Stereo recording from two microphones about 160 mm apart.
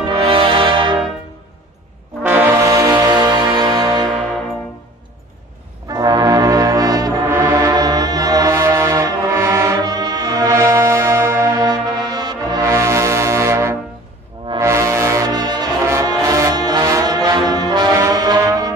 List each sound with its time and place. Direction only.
0.1 s music: 35° right (ahead or behind)
2.2 s music: 10° right (ahead or behind); by 4.1 s 30° right (ahead or behind)
5.9 s music: 25° right (ahead or behind)
14.6 s brass instrument: 20° right (ahead or behind)